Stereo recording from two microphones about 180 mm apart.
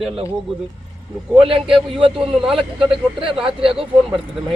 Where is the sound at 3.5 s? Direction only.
30° right (ahead or behind).